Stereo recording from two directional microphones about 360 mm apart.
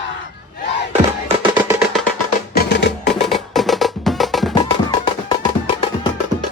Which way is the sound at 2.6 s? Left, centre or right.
Left.